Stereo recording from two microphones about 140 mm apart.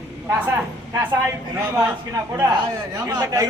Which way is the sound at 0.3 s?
10° right (ahead or behind).